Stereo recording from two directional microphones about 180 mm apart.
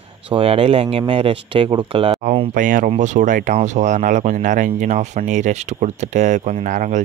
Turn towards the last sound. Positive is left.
turn(degrees=-45)  # may be behind; listen again after turning